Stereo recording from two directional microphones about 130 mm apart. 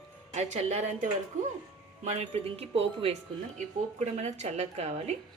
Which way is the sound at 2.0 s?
55° right (ahead or behind).